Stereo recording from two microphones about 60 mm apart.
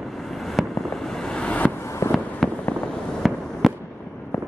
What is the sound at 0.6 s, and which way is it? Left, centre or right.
Fireworks, centre.